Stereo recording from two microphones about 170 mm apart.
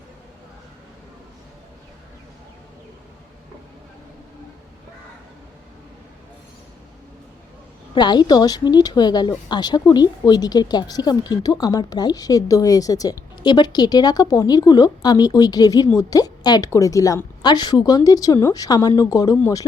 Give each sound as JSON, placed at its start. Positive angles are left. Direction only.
{"t": 7.9, "sound": "speech", "side_deg": 25}